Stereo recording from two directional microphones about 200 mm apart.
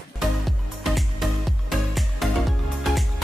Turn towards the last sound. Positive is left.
turn(degrees=0)  # may be behind; listen again after turning